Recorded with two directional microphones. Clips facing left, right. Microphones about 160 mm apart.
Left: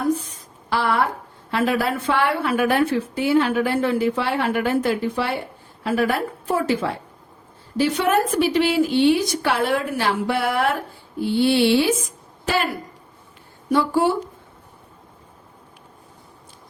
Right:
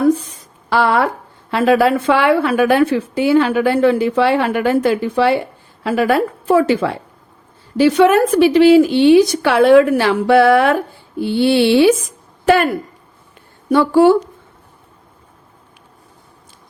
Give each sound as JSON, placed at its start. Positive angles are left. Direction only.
{"t": 0.7, "sound": "speech", "side_deg": -90}
{"t": 12.5, "sound": "a woman's voice", "side_deg": -55}
{"t": 13.7, "sound": "speech", "side_deg": -70}